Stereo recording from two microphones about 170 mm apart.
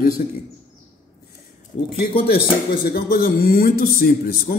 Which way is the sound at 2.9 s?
60° left (ahead or behind).